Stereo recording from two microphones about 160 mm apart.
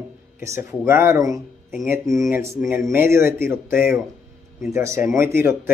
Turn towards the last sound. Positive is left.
turn(degrees=-15)  # may be behind; listen again after turning